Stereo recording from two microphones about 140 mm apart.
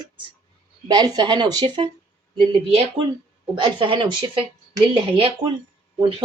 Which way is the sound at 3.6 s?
40° right (ahead or behind).